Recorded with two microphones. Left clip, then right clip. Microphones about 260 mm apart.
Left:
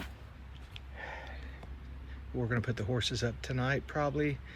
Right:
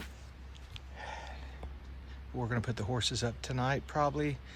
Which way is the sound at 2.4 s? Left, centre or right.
Centre.